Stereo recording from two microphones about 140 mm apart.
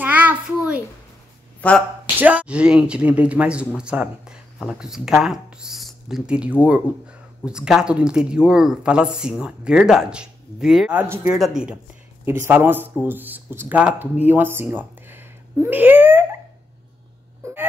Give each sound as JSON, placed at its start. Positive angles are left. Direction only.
{"t": 0.0, "sound": "a sound", "side_deg": -15}
{"t": 1.6, "sound": "speech", "side_deg": 10}
{"t": 2.1, "sound": "speech", "side_deg": -10}
{"t": 11.0, "sound": "speech", "side_deg": -15}
{"t": 11.3, "sound": "speech", "side_deg": 0}
{"t": 17.4, "sound": "a sound", "side_deg": -20}